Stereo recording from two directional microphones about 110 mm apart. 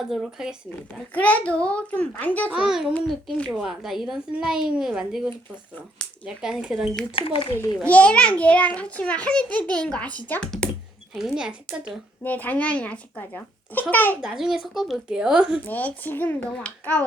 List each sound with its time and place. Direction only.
0.1 s a woman's voice: 5° right (ahead or behind)
1.1 s a child's voice: 15° left (ahead or behind)
2.5 s a woman's voice: 5° right (ahead or behind)
3.1 s a woman's voice: 5° left (ahead or behind)
7.2 s speech: 55° left (ahead or behind)
7.9 s a child's voice: 10° left (ahead or behind)
11.1 s a woman's voice: 5° right (ahead or behind)
12.2 s a child's voice: 15° left (ahead or behind)
14.2 s a woman's voice: 5° right (ahead or behind)
15.6 s a child's voice: 15° left (ahead or behind)